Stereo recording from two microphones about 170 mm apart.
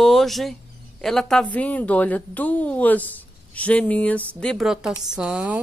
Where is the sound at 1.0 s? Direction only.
5° left (ahead or behind).